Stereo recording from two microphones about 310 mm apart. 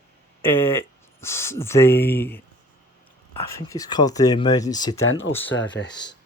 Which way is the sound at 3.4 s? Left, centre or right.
Centre.